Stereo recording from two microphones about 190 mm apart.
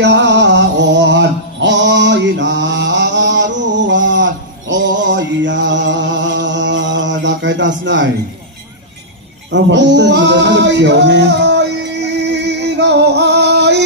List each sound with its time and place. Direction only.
0.0 s music: 65° right (ahead or behind)
9.5 s male singing: 70° right (ahead or behind)